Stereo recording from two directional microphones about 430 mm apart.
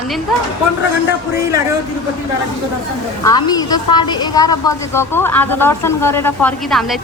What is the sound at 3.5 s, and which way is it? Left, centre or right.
A woman's voice, centre.